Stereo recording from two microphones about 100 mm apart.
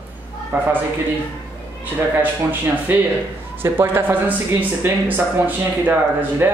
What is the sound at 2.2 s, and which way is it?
Speech, 20° right (ahead or behind).